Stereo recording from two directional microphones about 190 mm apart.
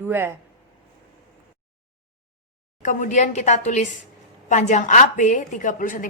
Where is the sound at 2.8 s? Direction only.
40° left (ahead or behind).